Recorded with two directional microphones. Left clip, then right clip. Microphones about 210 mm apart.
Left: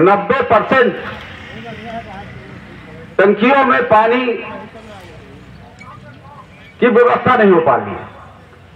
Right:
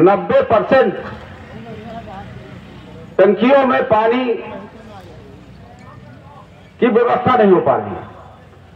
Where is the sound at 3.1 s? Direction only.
55° right (ahead or behind).